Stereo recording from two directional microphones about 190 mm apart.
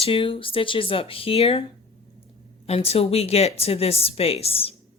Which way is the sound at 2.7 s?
30° left (ahead or behind).